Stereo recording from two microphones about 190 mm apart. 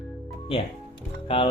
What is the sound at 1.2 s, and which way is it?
Speech, 25° left (ahead or behind).